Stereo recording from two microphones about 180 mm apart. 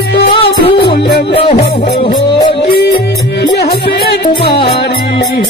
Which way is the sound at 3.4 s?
65° left (ahead or behind).